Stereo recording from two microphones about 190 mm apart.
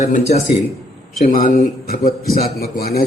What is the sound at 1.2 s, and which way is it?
A man's voice, 45° left (ahead or behind).